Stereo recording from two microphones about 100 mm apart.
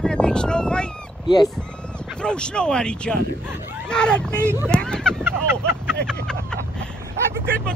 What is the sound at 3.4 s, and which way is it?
Speech, 20° right (ahead or behind).